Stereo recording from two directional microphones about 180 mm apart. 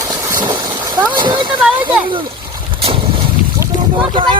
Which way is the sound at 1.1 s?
25° right (ahead or behind).